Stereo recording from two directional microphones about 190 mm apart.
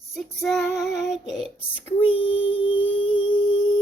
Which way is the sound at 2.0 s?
30° left (ahead or behind).